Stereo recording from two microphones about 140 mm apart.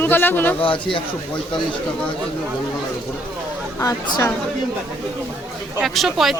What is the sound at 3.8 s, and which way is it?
Speech, 25° left (ahead or behind).